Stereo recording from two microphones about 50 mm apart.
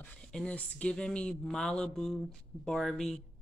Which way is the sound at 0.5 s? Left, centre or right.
Left.